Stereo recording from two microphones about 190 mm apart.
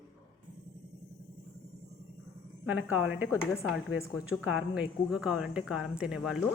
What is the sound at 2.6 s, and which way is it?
Speech, 10° right (ahead or behind).